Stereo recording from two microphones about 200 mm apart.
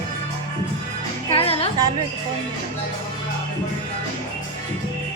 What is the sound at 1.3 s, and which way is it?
Music, 30° left (ahead or behind).